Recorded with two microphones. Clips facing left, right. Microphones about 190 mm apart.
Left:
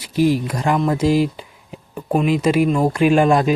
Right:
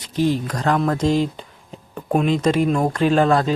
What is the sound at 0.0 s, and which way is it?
Speech, 10° left (ahead or behind).